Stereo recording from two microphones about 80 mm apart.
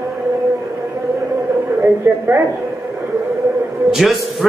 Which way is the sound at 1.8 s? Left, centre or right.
Right.